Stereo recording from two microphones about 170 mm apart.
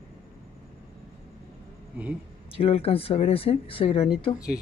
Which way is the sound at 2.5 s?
35° left (ahead or behind).